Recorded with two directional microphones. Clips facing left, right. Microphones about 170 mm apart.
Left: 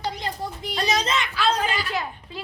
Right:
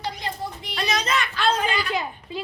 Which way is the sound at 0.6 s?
40° left (ahead or behind).